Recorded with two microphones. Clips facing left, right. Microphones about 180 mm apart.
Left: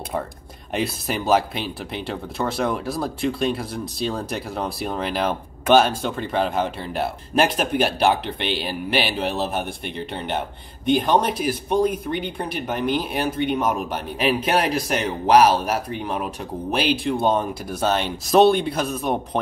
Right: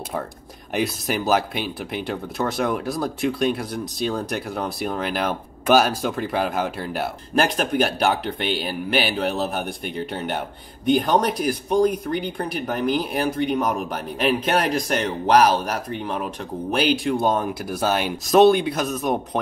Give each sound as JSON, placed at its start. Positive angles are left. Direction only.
{"t": 0.7, "sound": "speech", "side_deg": 0}